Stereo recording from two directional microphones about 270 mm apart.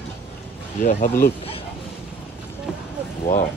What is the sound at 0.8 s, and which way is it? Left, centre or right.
Speech, left.